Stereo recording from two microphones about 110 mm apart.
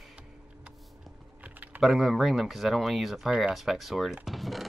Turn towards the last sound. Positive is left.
turn(degrees=0)  # may be behind; listen again after turning